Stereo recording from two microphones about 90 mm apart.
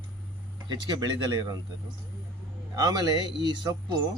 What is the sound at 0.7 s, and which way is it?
Speech, 50° right (ahead or behind).